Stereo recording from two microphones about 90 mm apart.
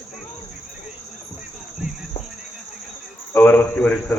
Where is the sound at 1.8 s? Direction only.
15° right (ahead or behind).